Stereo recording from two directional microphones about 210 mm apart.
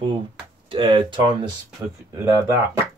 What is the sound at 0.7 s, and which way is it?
Speech, 25° right (ahead or behind).